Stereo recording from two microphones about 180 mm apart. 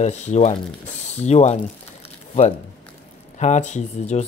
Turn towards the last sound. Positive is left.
turn(degrees=40)  # may be behind; listen again after turning